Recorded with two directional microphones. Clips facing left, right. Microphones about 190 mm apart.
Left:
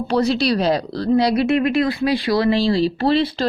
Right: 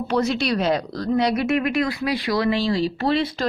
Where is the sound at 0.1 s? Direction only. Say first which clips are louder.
Left 4 dB; 35° left (ahead or behind).